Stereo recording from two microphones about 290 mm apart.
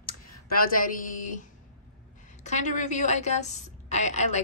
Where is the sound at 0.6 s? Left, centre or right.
Left.